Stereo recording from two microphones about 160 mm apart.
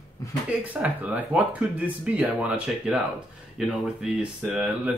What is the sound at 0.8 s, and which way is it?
Speech, 10° right (ahead or behind).